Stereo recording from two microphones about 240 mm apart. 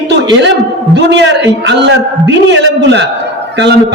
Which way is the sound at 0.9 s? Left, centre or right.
Right.